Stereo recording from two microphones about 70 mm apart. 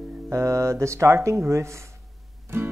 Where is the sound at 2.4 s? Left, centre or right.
Right.